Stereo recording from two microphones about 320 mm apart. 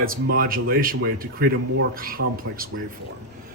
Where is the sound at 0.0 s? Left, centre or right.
Right.